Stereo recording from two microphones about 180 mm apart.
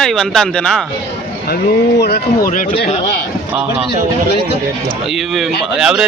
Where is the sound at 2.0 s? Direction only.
65° left (ahead or behind).